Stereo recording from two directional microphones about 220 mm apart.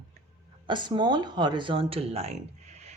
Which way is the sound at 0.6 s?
20° right (ahead or behind).